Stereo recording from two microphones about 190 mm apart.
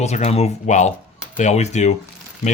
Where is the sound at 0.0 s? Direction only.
35° left (ahead or behind).